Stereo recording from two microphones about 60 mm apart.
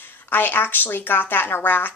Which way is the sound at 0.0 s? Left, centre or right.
Left.